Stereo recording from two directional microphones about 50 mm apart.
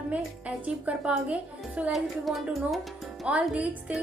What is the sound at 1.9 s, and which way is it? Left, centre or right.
Speech, centre.